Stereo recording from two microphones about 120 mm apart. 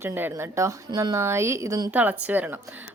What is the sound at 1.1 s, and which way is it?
Speech, 20° right (ahead or behind).